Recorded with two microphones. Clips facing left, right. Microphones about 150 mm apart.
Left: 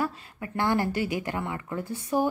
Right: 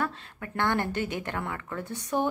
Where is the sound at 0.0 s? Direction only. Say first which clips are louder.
Left 2 dB; 10° left (ahead or behind).